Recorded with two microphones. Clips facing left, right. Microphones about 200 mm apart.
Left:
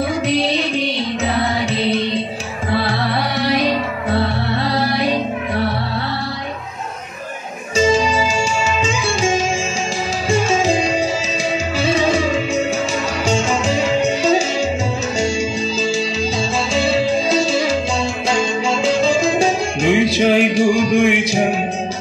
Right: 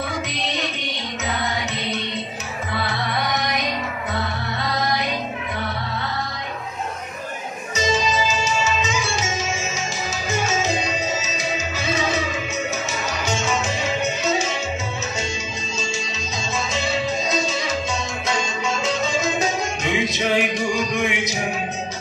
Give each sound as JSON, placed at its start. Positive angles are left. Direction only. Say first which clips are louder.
{"t": 0.3, "sound": "music", "louder": "left 10 dB", "side_deg": 30}
{"t": 7.7, "sound": "music", "louder": "left 7 dB", "side_deg": 30}
{"t": 16.7, "sound": "music", "louder": "left 8 dB", "side_deg": 30}